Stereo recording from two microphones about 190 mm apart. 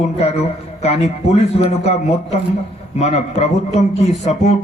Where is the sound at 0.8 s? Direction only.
35° left (ahead or behind).